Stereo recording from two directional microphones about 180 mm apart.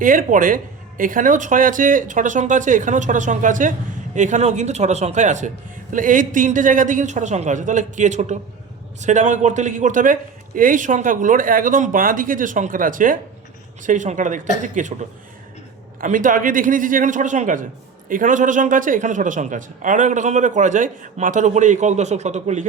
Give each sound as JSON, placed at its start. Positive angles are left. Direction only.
{"t": 0.0, "sound": "speech", "side_deg": -50}
{"t": 16.0, "sound": "speech", "side_deg": -45}